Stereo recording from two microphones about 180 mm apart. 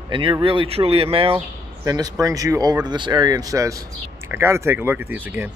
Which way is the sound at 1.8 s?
20° right (ahead or behind).